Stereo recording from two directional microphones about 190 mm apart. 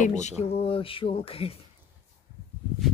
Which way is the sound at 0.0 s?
40° left (ahead or behind).